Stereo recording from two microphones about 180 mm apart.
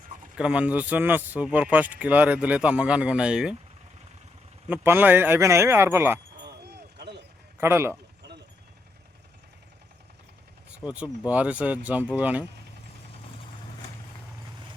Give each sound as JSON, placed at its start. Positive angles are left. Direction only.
{"t": 0.3, "sound": "speech", "side_deg": -5}
{"t": 4.7, "sound": "speech", "side_deg": -10}
{"t": 6.7, "sound": "run", "side_deg": -65}
{"t": 7.6, "sound": "speech", "side_deg": -15}
{"t": 10.7, "sound": "speech", "side_deg": -5}